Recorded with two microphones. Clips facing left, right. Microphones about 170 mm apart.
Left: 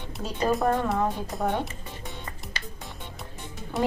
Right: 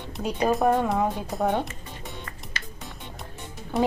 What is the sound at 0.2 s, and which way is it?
Speech, 15° right (ahead or behind).